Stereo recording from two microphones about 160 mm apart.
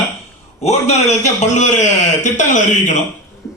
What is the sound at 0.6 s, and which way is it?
A man's voice, 45° left (ahead or behind).